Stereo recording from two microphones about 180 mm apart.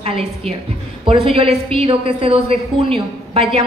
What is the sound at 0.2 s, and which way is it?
A woman's voice, 35° right (ahead or behind).